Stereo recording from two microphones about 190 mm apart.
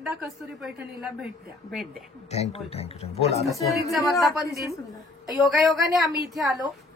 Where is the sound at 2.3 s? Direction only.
35° left (ahead or behind).